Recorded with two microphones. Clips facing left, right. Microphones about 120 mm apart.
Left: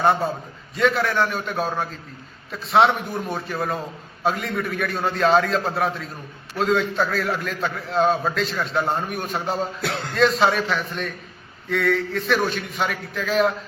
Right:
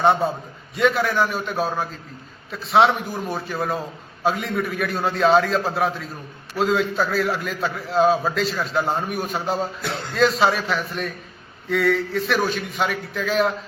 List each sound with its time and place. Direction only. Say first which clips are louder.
0.0 s a man's voice: right 1 dB; centre (ahead or behind)
9.8 s speech: left 1 dB; 65° left (ahead or behind)
10.2 s a man's voice: even; centre (ahead or behind)